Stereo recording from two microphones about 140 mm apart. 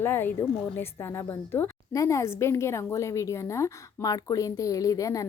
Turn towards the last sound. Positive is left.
turn(degrees=25)  # may be behind; listen again after turning